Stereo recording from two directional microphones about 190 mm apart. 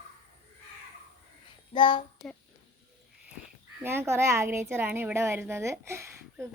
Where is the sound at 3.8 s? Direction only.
10° right (ahead or behind).